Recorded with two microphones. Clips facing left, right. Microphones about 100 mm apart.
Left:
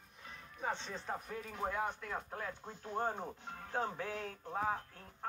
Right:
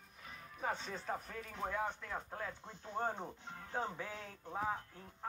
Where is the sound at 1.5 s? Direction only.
15° left (ahead or behind).